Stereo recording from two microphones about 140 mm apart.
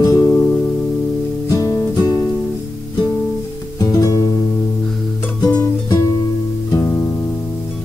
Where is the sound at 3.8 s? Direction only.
25° left (ahead or behind).